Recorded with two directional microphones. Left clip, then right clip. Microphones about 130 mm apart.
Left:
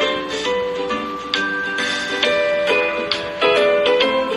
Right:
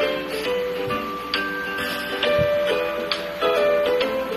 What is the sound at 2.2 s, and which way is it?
Music, 15° left (ahead or behind).